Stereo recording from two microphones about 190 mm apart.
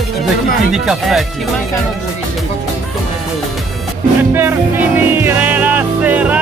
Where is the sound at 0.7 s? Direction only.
Centre (ahead or behind).